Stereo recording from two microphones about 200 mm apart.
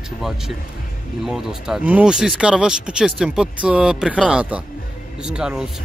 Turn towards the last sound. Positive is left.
turn(degrees=-5)  # may be behind; listen again after turning